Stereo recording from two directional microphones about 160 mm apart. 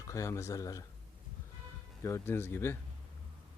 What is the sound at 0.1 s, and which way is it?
Speech, 20° left (ahead or behind).